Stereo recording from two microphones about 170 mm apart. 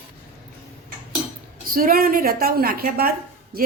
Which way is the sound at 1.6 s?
55° right (ahead or behind).